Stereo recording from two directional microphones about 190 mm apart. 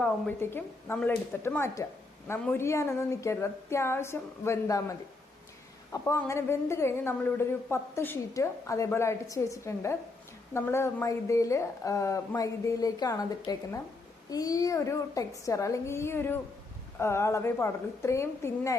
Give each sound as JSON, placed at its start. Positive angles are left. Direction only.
{"t": 0.0, "sound": "speech", "side_deg": 10}